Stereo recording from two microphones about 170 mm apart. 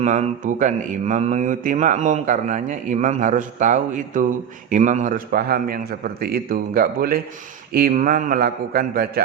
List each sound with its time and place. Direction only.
0.0 s mantra: 45° right (ahead or behind)
4.7 s a man's voice: 45° right (ahead or behind); by 9.2 s 65° right (ahead or behind)